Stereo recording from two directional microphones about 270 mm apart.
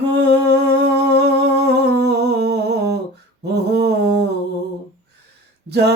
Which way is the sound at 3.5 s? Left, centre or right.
Right.